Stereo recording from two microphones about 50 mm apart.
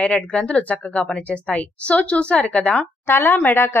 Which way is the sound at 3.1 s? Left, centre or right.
Left.